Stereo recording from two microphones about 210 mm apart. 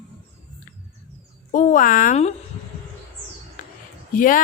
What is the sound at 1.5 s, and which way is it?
Speech, 40° left (ahead or behind).